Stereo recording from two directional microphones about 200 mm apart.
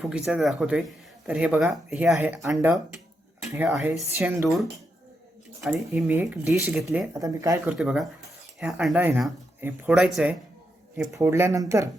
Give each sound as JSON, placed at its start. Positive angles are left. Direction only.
{"t": 0.0, "sound": "speech", "side_deg": 0}
{"t": 5.5, "sound": "speech", "side_deg": 0}
{"t": 11.1, "sound": "speech", "side_deg": -15}